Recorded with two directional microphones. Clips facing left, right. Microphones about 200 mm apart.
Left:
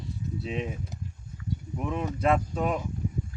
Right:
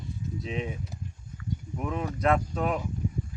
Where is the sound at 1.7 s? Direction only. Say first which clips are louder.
Left 1 dB; centre (ahead or behind).